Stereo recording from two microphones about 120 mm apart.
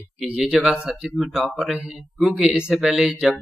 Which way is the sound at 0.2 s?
5° right (ahead or behind).